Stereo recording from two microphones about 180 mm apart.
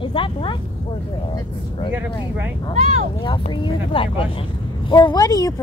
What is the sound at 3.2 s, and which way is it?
Speech, 25° left (ahead or behind).